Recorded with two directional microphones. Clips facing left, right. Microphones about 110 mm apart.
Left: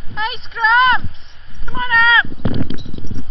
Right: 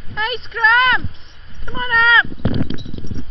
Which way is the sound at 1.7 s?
5° left (ahead or behind).